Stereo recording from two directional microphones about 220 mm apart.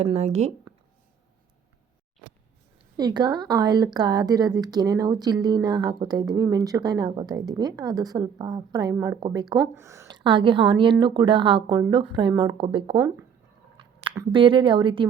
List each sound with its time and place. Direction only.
0.0 s speech: 30° right (ahead or behind)
3.0 s speech: 20° right (ahead or behind)